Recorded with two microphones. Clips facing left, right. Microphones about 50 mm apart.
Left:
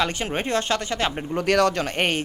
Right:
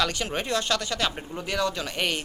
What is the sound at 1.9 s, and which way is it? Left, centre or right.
Speech, left.